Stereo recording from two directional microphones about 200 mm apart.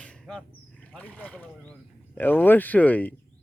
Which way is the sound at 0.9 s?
5° left (ahead or behind).